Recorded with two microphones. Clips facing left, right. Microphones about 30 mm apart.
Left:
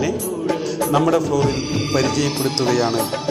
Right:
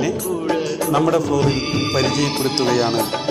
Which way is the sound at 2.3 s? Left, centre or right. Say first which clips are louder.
Right 1 dB; centre.